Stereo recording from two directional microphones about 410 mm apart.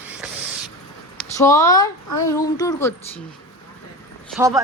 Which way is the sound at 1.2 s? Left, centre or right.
Centre.